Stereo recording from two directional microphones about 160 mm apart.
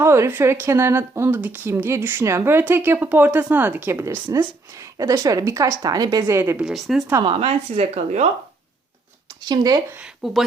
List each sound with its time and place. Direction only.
0.0 s a woman's voice: 15° right (ahead or behind)
7.1 s speech: 25° right (ahead or behind)
7.3 s a woman's voice: 40° right (ahead or behind)
9.5 s speech: 25° right (ahead or behind)
10.0 s speech: centre (ahead or behind)